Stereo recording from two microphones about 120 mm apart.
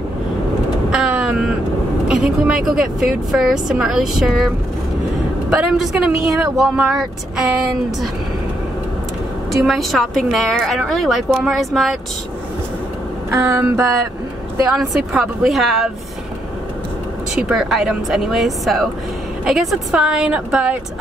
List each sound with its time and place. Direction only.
0.9 s vehicle: 5° right (ahead or behind)
2.0 s a woman's voice: 5° right (ahead or behind)
5.5 s a woman's voice: 5° right (ahead or behind)
9.5 s a woman's voice: centre (ahead or behind)
13.3 s music: 25° right (ahead or behind)
14.8 s a woman's voice: centre (ahead or behind)
17.4 s a woman's voice: 5° right (ahead or behind)